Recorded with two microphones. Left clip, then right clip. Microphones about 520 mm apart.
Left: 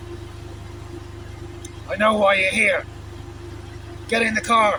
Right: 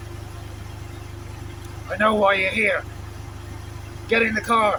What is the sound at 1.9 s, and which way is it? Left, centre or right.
Speech, right.